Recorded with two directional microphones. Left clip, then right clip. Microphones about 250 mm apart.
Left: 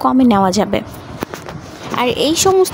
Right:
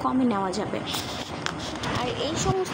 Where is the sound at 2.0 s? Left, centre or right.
Left.